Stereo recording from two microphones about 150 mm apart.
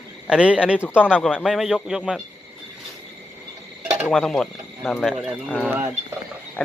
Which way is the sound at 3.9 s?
Centre (ahead or behind).